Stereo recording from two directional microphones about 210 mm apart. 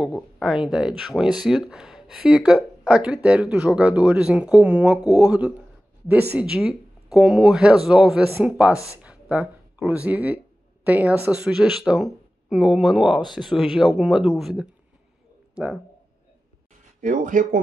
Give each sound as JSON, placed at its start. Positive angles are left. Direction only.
{"t": 0.4, "sound": "speech", "side_deg": -5}
{"t": 17.0, "sound": "speech", "side_deg": -40}